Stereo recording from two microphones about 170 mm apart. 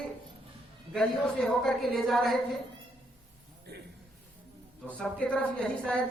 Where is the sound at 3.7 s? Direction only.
75° right (ahead or behind).